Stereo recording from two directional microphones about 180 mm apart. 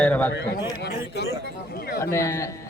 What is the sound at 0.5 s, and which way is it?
Speech, 20° left (ahead or behind).